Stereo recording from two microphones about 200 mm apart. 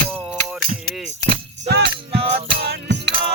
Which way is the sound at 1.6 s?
55° right (ahead or behind).